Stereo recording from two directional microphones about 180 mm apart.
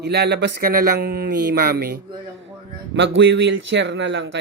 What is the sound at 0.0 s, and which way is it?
Speech, 65° right (ahead or behind).